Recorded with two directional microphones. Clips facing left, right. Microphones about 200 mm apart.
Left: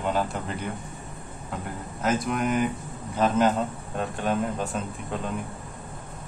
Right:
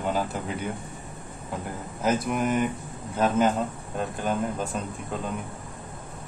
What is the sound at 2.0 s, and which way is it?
Speech, centre (ahead or behind).